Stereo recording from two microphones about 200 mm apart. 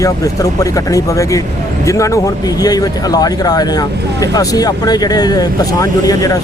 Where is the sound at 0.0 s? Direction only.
15° left (ahead or behind).